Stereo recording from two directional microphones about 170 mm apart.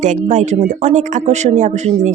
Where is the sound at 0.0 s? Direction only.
45° right (ahead or behind).